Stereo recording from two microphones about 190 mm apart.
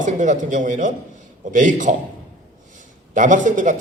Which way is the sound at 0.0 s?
40° right (ahead or behind).